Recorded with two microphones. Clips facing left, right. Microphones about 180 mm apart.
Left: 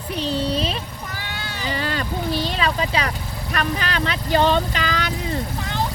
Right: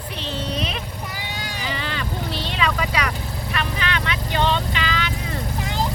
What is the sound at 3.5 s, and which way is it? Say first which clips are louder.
Speech: left 3 dB; 40° left (ahead or behind).